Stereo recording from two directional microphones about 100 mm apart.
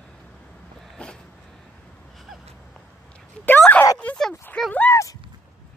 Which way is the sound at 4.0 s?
10° left (ahead or behind).